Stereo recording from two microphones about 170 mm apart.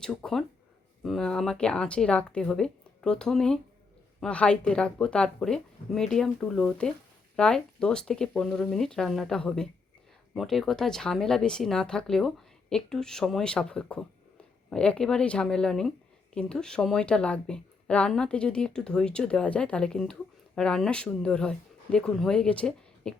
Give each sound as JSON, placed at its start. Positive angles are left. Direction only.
{"t": 0.0, "sound": "speech", "side_deg": 5}